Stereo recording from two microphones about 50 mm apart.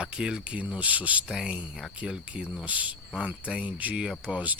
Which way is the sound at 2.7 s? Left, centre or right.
Right.